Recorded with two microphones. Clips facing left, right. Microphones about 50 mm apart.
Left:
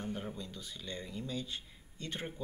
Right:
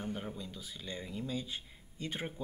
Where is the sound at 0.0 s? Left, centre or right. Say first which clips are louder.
Even; centre.